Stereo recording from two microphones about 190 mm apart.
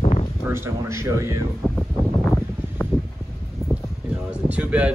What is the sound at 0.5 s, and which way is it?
Speech, 15° right (ahead or behind).